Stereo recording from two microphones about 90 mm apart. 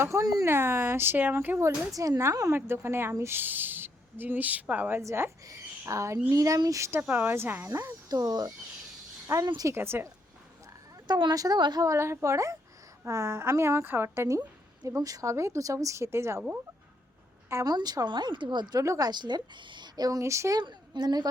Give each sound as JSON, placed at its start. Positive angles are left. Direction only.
{"t": 0.0, "sound": "speech", "side_deg": -35}
{"t": 0.4, "sound": "a woman's voice", "side_deg": -25}
{"t": 2.0, "sound": "a woman's voice", "side_deg": -35}
{"t": 7.1, "sound": "a woman's voice", "side_deg": -20}
{"t": 8.1, "sound": "a woman's voice", "side_deg": -45}
{"t": 9.7, "sound": "a woman's voice", "side_deg": -25}
{"t": 11.1, "sound": "a woman's voice", "side_deg": -55}
{"t": 11.9, "sound": "a woman's voice", "side_deg": -30}
{"t": 17.5, "sound": "speech", "side_deg": -35}
{"t": 17.7, "sound": "a woman's voice", "side_deg": -50}
{"t": 18.8, "sound": "a woman's voice", "side_deg": -40}
{"t": 20.6, "sound": "a woman's voice", "side_deg": -55}